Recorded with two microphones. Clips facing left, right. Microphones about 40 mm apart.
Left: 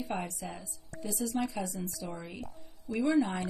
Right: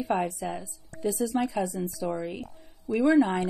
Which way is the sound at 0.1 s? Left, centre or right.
Right.